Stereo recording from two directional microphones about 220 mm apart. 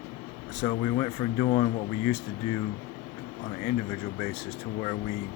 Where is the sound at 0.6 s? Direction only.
25° left (ahead or behind).